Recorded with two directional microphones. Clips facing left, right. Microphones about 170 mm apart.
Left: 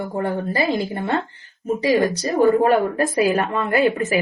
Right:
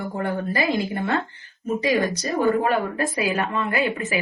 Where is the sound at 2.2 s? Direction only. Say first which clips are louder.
Left 5 dB; 35° left (ahead or behind).